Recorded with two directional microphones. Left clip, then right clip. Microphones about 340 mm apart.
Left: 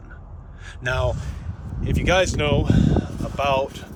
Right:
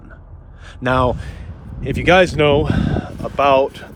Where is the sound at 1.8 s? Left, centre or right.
Right.